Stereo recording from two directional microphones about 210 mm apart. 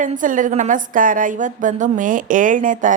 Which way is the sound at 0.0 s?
40° right (ahead or behind).